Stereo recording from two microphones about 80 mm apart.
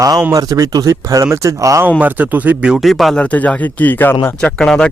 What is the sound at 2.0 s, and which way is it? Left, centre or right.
Speech, right.